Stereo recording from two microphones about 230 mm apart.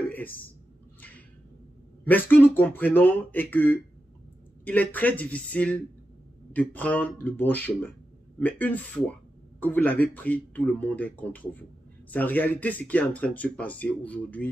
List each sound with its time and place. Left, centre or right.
2.0 s speech: centre